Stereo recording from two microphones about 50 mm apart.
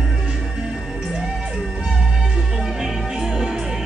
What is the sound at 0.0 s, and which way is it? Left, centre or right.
Music, centre.